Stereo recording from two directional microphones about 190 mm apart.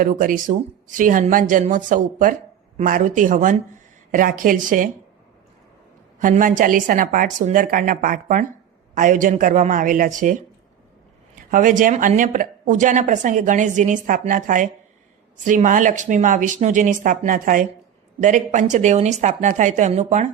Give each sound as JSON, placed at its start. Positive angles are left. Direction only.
{"t": 0.0, "sound": "speech", "side_deg": -45}
{"t": 6.1, "sound": "speech", "side_deg": -45}
{"t": 11.5, "sound": "speech", "side_deg": -45}